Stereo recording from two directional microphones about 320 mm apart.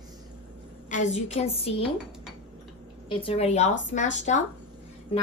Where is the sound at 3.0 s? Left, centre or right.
Centre.